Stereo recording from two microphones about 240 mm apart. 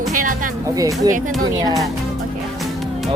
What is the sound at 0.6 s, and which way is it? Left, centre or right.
Speech, centre.